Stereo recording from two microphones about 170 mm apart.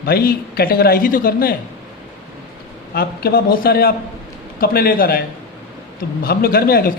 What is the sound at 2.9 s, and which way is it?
Speech, 65° left (ahead or behind).